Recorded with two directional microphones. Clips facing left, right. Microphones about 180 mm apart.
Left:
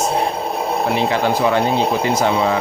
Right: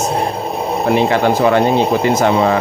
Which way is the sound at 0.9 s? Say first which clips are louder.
Right 6 dB; 55° right (ahead or behind).